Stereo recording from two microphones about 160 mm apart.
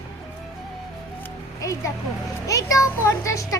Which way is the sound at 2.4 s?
20° left (ahead or behind).